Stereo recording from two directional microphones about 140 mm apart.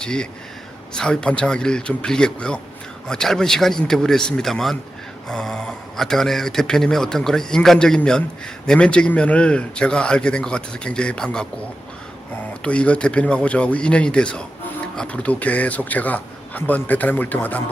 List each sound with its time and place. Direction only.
0.0 s a man's voice: 5° left (ahead or behind)
12.6 s a man's voice: 10° left (ahead or behind)